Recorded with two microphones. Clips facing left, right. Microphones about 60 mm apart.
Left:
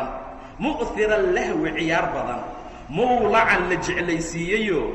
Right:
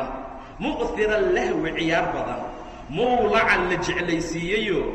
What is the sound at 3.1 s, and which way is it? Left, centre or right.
Speech, centre.